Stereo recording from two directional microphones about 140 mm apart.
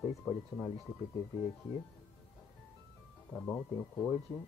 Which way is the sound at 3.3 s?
10° left (ahead or behind).